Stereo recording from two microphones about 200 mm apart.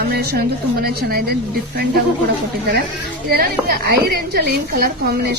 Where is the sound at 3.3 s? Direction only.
50° right (ahead or behind).